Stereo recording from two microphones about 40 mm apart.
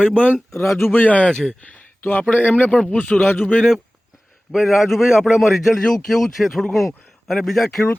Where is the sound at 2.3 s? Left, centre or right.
Left.